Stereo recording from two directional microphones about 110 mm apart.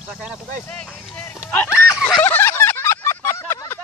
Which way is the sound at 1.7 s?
5° right (ahead or behind).